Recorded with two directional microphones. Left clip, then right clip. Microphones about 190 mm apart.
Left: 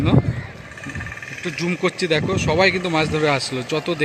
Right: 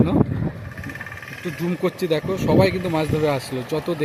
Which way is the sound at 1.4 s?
5° right (ahead or behind).